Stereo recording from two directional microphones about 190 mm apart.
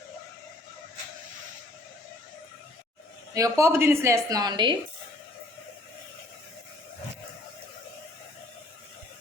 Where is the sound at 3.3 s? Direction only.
15° right (ahead or behind).